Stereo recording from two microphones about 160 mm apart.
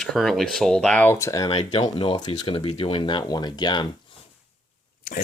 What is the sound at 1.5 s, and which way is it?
Speech, 40° left (ahead or behind).